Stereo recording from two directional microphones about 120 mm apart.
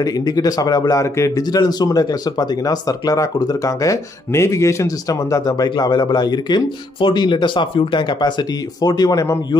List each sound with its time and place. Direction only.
0.0 s speech: 30° left (ahead or behind)
8.8 s speech: 35° left (ahead or behind)